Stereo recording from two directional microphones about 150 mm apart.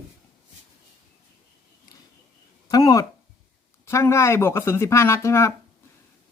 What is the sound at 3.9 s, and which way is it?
Speech, 20° left (ahead or behind).